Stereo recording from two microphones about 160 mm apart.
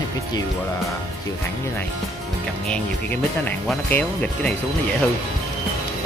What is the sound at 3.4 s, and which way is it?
Speech, 10° left (ahead or behind).